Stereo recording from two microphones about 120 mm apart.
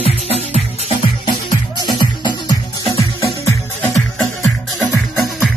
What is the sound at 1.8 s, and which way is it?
Music, 35° left (ahead or behind).